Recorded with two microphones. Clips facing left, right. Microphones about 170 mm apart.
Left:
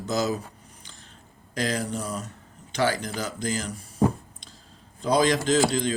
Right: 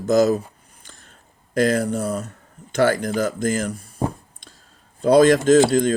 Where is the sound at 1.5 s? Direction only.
50° right (ahead or behind).